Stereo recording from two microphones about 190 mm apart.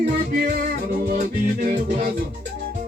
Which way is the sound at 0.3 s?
55° right (ahead or behind).